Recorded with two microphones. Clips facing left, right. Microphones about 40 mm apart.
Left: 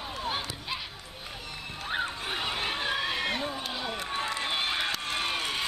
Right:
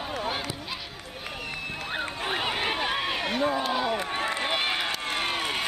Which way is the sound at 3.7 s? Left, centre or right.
Right.